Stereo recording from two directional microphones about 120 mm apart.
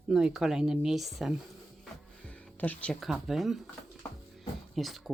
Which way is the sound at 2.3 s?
15° left (ahead or behind).